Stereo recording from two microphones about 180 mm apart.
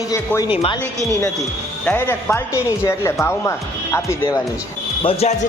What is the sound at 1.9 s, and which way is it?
Speech, 10° left (ahead or behind).